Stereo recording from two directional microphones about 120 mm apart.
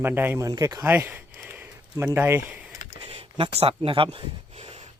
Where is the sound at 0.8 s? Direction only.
15° right (ahead or behind).